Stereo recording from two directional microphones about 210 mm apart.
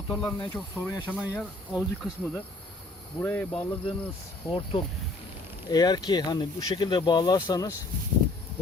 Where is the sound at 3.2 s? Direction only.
10° left (ahead or behind).